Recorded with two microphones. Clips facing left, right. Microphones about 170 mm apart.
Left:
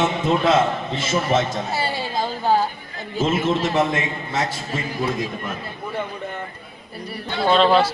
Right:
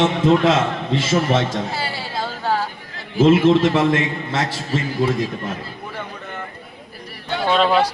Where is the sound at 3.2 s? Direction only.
90° right.